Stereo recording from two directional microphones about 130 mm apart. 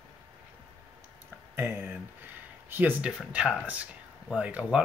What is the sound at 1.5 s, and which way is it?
Speech, 20° right (ahead or behind).